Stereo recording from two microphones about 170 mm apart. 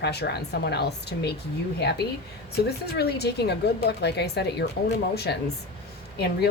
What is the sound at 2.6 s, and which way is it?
Speech, 70° left (ahead or behind).